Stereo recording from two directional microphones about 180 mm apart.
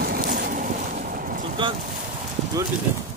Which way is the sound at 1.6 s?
25° right (ahead or behind).